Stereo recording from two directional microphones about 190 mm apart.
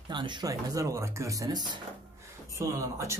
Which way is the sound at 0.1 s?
25° right (ahead or behind).